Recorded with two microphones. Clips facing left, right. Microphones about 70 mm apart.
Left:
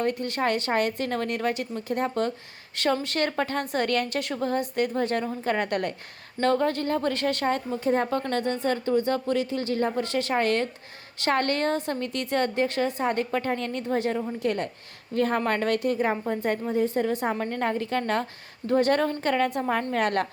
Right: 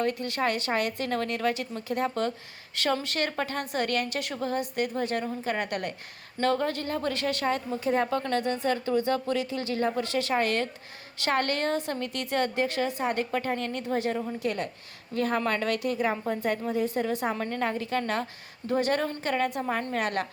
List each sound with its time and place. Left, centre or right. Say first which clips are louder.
0.0 s a woman's voice: left 2 dB; left